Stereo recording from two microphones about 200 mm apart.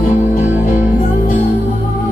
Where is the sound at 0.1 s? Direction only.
45° left (ahead or behind).